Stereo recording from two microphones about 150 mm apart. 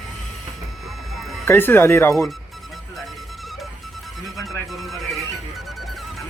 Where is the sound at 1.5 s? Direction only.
15° left (ahead or behind).